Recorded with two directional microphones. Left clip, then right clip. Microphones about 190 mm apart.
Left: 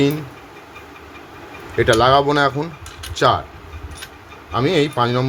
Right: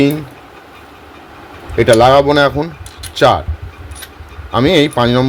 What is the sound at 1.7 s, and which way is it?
Speech, 30° right (ahead or behind).